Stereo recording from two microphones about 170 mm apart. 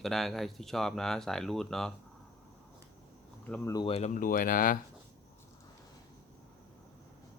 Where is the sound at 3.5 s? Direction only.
20° left (ahead or behind).